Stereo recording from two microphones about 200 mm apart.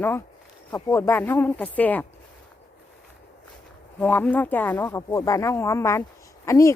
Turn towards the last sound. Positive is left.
turn(degrees=15)  # may be behind; listen again after turning